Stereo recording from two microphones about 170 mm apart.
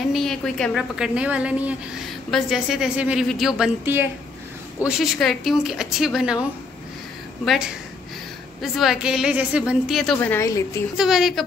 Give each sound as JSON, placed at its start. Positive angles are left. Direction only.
{"t": 0.1, "sound": "a woman's voice", "side_deg": 0}
{"t": 8.5, "sound": "a woman's voice", "side_deg": 0}
{"t": 10.1, "sound": "a woman's voice", "side_deg": 15}
{"t": 11.0, "sound": "a woman's voice", "side_deg": 0}